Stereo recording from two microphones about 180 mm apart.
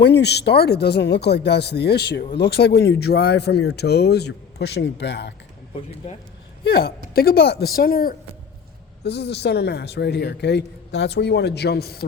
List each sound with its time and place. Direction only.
0.0 s speech: 70° left (ahead or behind)
6.7 s speech: 60° left (ahead or behind)
9.0 s speech: 70° left (ahead or behind)